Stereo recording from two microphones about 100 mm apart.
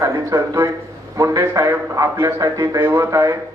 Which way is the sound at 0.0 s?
35° right (ahead or behind).